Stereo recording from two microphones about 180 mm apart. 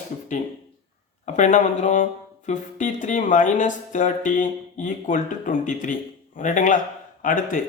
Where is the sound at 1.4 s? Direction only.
40° left (ahead or behind).